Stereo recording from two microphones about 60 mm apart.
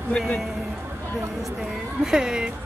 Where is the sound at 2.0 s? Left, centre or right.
Centre.